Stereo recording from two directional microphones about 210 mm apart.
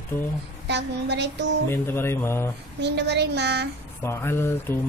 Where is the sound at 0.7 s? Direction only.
55° right (ahead or behind).